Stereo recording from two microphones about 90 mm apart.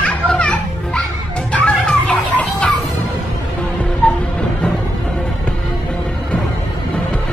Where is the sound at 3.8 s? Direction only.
10° left (ahead or behind).